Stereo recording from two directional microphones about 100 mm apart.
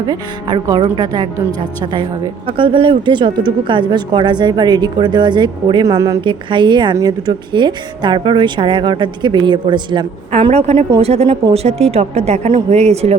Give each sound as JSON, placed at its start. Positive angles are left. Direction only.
{"t": 0.0, "sound": "speech", "side_deg": -50}
{"t": 5.8, "sound": "speech", "side_deg": -35}
{"t": 6.2, "sound": "speech", "side_deg": -50}
{"t": 10.3, "sound": "a woman's voice", "side_deg": -90}